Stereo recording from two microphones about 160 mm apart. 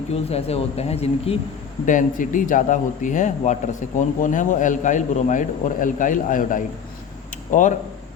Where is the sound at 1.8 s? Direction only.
55° left (ahead or behind).